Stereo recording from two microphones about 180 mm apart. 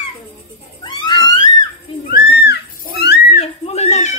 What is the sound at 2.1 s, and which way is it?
Music, 65° left (ahead or behind).